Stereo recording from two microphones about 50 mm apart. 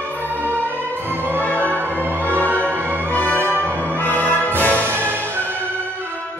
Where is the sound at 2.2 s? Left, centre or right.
Left.